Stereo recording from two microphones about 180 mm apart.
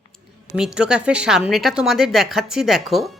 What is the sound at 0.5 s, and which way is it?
Speech, 5° right (ahead or behind).